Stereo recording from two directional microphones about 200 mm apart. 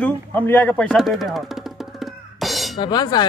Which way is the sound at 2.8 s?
20° left (ahead or behind).